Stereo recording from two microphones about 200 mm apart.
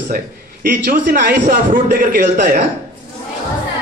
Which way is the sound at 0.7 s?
45° right (ahead or behind).